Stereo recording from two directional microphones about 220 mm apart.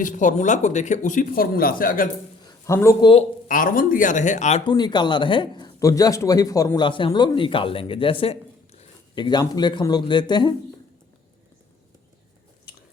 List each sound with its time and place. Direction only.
0.0 s speech: 35° left (ahead or behind)
2.4 s a sound: 15° left (ahead or behind)
3.5 s speech: 40° left (ahead or behind); by 10.5 s 20° left (ahead or behind)